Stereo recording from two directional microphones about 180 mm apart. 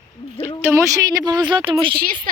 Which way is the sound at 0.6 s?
15° right (ahead or behind).